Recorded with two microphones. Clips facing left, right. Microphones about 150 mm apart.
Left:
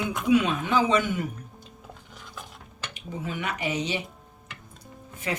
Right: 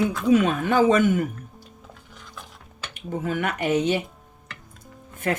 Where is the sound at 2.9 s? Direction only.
50° right (ahead or behind).